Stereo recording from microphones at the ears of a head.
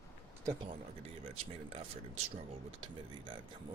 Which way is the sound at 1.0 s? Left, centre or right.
Right.